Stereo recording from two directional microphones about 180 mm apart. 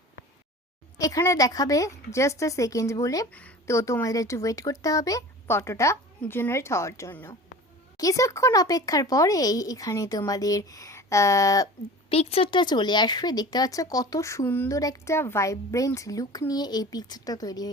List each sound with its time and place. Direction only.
0.9 s speech: 20° left (ahead or behind)
12.0 s speech: 35° left (ahead or behind)